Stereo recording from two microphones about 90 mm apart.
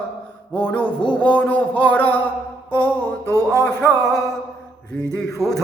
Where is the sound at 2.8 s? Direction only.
15° left (ahead or behind).